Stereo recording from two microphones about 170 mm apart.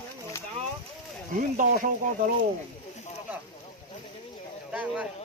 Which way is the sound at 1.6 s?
50° right (ahead or behind).